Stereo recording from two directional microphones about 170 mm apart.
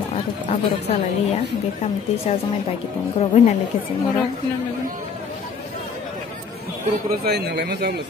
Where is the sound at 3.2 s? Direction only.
40° left (ahead or behind).